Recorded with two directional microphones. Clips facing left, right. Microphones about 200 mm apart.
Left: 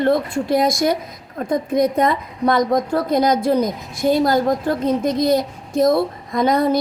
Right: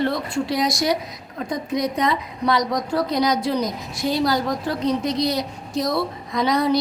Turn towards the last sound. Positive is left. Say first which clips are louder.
# left 3 dB
turn(degrees=50)  # may be behind; listen again after turning